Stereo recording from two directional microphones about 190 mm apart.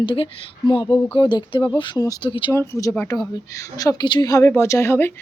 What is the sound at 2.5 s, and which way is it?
Speech, 15° left (ahead or behind).